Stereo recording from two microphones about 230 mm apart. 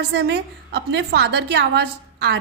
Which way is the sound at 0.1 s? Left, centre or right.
Right.